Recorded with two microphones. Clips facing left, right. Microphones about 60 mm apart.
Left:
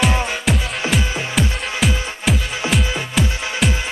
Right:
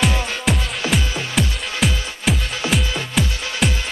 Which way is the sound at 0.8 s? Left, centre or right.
Left.